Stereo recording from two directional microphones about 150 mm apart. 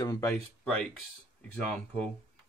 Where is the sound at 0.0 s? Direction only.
20° left (ahead or behind).